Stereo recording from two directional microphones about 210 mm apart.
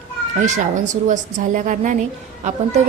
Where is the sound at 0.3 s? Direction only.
35° right (ahead or behind).